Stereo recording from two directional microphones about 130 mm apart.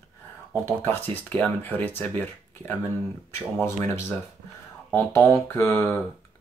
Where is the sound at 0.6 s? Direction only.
20° left (ahead or behind).